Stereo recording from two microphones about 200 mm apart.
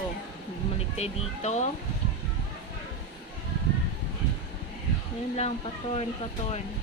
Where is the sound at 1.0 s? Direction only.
35° left (ahead or behind).